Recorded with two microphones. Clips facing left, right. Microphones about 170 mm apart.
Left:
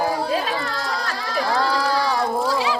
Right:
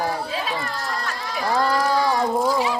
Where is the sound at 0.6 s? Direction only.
85° left.